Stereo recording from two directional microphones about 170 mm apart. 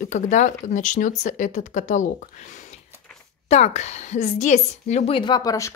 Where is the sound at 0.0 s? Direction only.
45° left (ahead or behind).